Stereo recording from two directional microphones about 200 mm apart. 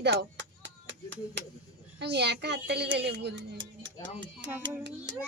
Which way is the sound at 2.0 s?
60° right (ahead or behind).